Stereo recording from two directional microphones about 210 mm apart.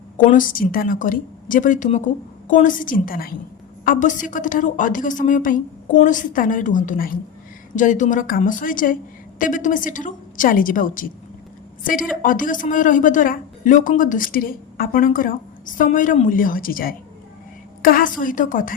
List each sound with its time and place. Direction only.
0.2 s a woman's voice: 40° left (ahead or behind)